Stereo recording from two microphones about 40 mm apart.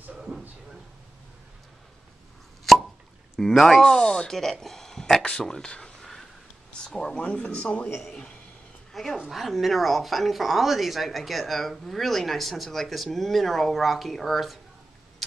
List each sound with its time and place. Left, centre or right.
2.7 s plop: centre
3.3 s speech: centre; by 7.9 s left
7.9 s speech: centre